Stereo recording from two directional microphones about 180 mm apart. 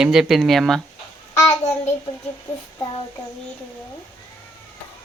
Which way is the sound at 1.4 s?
40° left (ahead or behind).